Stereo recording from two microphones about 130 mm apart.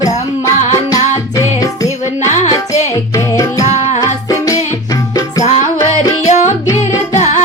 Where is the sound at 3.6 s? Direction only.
65° left (ahead or behind).